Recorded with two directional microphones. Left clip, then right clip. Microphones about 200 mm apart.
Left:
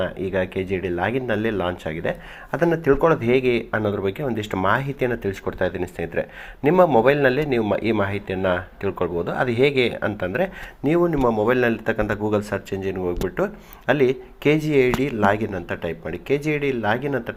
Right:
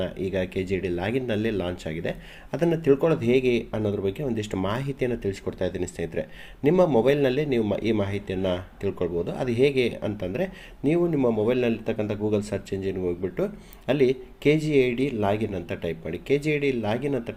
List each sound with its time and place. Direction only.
0.0 s a man's voice: 10° right (ahead or behind)